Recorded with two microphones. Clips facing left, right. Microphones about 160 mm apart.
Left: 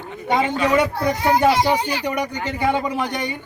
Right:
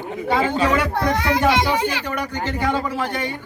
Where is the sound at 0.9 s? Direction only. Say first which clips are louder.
Left 1 dB; 85° right.